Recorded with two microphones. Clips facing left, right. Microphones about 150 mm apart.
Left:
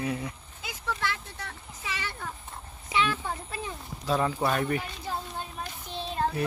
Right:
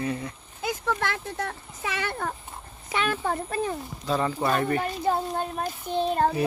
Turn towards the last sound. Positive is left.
turn(degrees=-50)  # may be behind; listen again after turning